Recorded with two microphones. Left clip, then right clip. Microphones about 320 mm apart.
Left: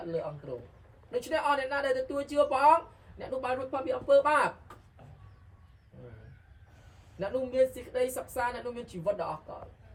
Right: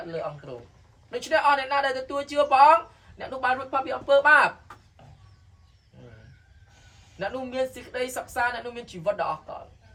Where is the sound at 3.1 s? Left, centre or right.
Centre.